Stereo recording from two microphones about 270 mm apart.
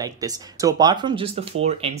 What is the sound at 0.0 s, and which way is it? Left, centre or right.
Speech, centre.